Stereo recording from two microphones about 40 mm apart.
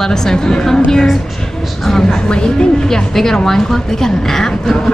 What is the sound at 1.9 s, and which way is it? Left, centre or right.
A woman's voice, centre.